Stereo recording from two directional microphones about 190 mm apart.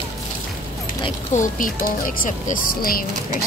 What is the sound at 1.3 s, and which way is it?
Speech, 45° left (ahead or behind).